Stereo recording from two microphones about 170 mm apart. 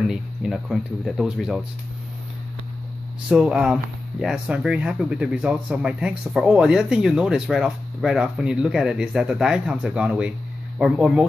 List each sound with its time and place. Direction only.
0.0 s speech: centre (ahead or behind)
3.3 s speech: 5° right (ahead or behind)